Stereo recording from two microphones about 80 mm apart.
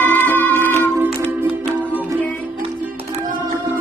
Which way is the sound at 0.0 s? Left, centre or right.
Left.